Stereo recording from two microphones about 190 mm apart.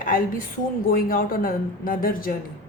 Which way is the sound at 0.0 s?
45° left (ahead or behind).